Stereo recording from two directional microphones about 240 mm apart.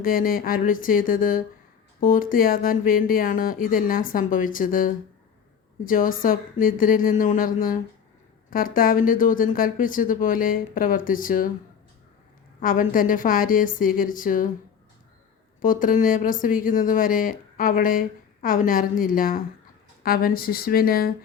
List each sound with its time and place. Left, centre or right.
0.0 s speech: left
12.5 s speech: left
15.6 s speech: left